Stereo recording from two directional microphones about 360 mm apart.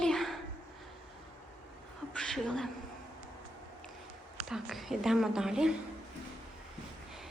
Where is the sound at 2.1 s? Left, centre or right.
Centre.